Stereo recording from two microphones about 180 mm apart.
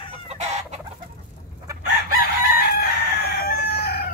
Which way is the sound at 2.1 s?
60° left (ahead or behind).